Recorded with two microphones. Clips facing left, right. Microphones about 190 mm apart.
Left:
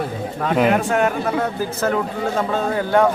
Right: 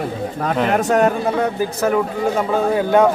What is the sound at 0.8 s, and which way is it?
Speech, 40° right (ahead or behind).